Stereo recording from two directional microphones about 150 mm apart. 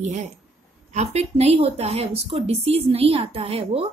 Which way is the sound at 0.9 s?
45° right (ahead or behind).